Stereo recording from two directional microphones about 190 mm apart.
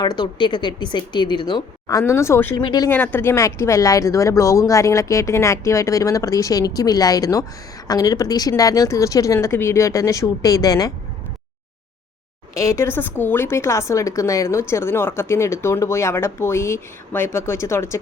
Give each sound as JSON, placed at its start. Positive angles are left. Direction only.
{"t": 0.0, "sound": "speech", "side_deg": 20}
{"t": 2.9, "sound": "speech", "side_deg": 10}
{"t": 12.5, "sound": "speech", "side_deg": 15}